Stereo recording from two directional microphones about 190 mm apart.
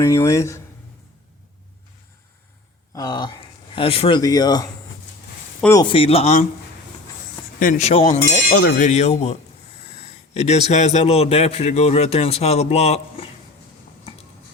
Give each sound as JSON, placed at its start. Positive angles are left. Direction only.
{"t": 0.0, "sound": "speech", "side_deg": 15}
{"t": 2.9, "sound": "speech", "side_deg": 20}
{"t": 5.7, "sound": "a man's voice", "side_deg": 25}
{"t": 7.6, "sound": "a man's voice", "side_deg": 40}
{"t": 10.0, "sound": "a sound", "side_deg": 35}
{"t": 10.7, "sound": "a man's voice", "side_deg": 35}